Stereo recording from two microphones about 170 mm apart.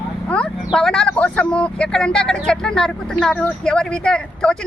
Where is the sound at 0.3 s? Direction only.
5° left (ahead or behind).